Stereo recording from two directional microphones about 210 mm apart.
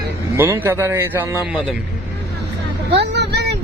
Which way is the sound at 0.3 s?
10° right (ahead or behind).